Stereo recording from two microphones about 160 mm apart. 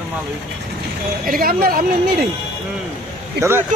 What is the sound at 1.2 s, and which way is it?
Speech, 65° right (ahead or behind).